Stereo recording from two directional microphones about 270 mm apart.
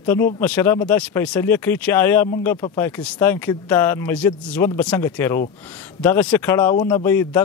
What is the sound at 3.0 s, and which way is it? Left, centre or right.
Speech, centre.